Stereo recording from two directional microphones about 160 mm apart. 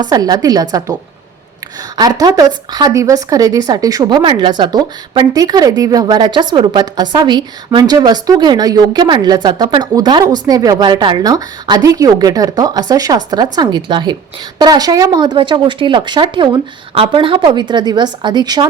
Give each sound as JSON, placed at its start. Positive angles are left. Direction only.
{"t": 0.0, "sound": "speech", "side_deg": -25}
{"t": 2.0, "sound": "speech", "side_deg": -25}